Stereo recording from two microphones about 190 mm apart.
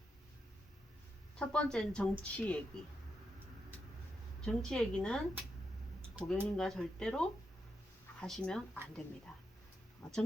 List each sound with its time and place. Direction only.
1.4 s a woman's voice: 5° left (ahead or behind)
4.4 s a woman's voice: 5° left (ahead or behind)
6.1 s speech: 10° right (ahead or behind)
6.6 s a woman's voice: 5° left (ahead or behind)
10.0 s speech: centre (ahead or behind)